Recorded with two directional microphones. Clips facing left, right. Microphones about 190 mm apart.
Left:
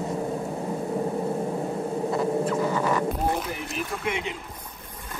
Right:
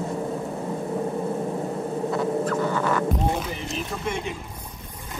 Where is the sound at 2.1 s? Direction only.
Centre (ahead or behind).